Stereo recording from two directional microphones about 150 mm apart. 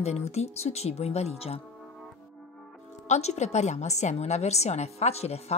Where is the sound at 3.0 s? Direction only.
50° left (ahead or behind).